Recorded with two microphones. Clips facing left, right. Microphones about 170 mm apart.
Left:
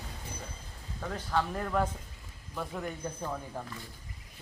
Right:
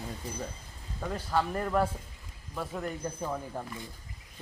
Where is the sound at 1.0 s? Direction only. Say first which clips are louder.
Right 2 dB; 10° right (ahead or behind).